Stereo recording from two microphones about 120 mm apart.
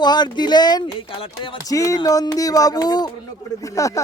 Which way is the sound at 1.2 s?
45° left (ahead or behind).